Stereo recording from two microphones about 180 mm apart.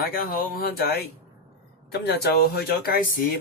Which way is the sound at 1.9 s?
60° left (ahead or behind).